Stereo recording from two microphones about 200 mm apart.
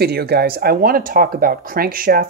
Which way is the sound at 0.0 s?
50° right (ahead or behind).